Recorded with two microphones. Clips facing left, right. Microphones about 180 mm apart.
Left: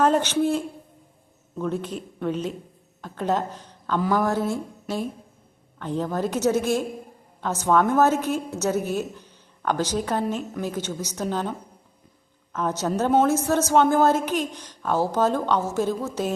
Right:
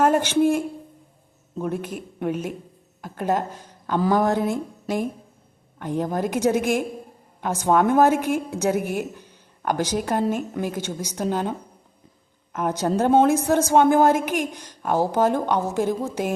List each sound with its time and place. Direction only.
0.0 s a woman's voice: 10° right (ahead or behind)
12.5 s a woman's voice: 10° right (ahead or behind)